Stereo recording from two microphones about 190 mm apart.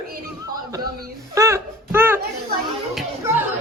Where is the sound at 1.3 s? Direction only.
15° right (ahead or behind).